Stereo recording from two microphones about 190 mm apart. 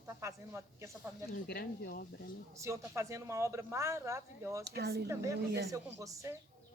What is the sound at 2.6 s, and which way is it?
Speech, 15° right (ahead or behind).